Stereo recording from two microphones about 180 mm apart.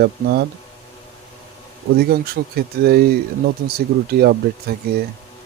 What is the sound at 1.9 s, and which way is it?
Speech, 60° right (ahead or behind).